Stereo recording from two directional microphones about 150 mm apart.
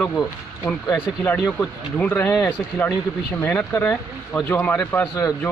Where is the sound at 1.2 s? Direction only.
10° left (ahead or behind).